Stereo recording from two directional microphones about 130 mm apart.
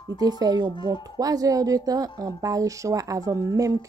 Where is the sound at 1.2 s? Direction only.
30° right (ahead or behind).